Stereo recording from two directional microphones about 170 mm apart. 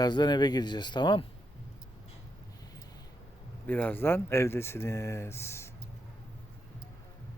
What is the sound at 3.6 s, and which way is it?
Speech, 10° left (ahead or behind).